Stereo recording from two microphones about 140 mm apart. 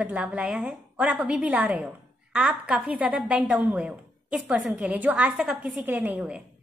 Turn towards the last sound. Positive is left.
turn(degrees=-10)  # may be behind; listen again after turning